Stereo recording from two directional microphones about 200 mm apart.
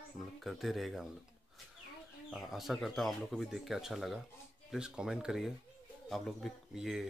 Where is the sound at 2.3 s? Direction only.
Centre (ahead or behind).